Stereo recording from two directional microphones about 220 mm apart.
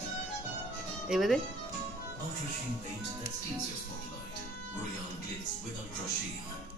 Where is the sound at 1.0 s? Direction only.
Centre (ahead or behind).